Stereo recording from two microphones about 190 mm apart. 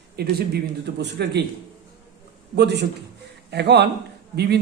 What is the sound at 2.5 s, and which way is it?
Speech, 65° right (ahead or behind).